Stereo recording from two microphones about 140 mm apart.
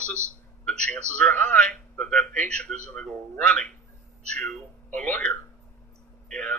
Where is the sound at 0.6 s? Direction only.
10° left (ahead or behind).